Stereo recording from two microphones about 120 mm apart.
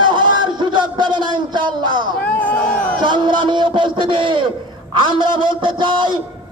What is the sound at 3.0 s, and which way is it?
A man's voice, 40° right (ahead or behind).